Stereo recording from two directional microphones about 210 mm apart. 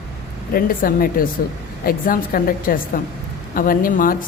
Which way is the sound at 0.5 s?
45° left (ahead or behind).